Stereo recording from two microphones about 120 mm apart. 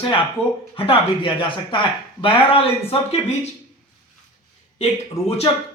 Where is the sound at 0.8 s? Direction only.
45° left (ahead or behind).